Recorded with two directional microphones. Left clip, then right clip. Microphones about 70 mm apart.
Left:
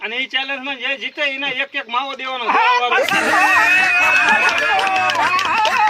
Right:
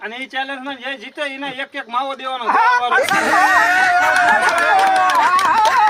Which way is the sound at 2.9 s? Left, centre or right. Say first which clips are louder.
Right 1 dB; centre.